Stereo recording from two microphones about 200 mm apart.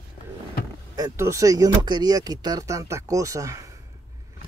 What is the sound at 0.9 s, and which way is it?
Speech, 15° right (ahead or behind).